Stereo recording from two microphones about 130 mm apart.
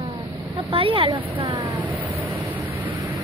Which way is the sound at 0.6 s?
45° right (ahead or behind).